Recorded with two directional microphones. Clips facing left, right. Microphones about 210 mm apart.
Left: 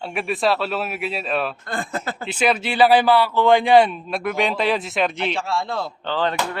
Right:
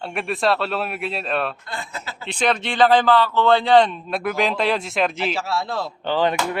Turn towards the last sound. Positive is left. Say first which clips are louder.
# right 2 dB
turn(degrees=-15)  # may be behind; listen again after turning